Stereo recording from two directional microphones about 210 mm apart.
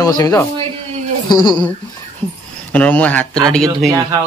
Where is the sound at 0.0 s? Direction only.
15° left (ahead or behind).